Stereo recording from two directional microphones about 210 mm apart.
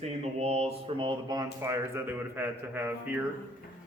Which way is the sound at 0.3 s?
30° right (ahead or behind).